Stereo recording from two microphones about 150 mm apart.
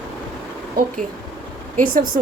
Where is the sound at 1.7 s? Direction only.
65° right (ahead or behind).